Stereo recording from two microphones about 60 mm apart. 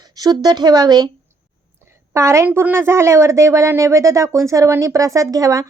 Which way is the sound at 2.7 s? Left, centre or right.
Right.